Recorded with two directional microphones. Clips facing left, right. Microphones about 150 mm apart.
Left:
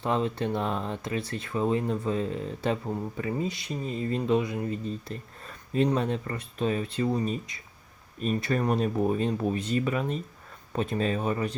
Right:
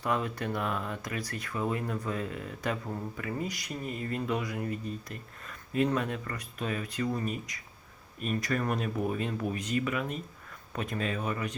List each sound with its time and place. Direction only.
0.0 s speech: 25° left (ahead or behind)